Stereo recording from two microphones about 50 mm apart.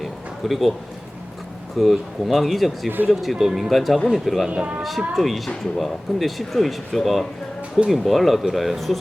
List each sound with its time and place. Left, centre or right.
0.0 s a sound: centre
1.8 s speech: centre
4.4 s speech: centre
4.8 s speech: centre